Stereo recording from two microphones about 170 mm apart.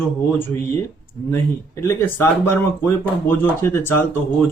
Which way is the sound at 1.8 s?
15° left (ahead or behind).